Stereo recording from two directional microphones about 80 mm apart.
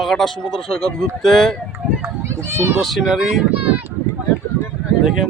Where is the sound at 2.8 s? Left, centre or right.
Centre.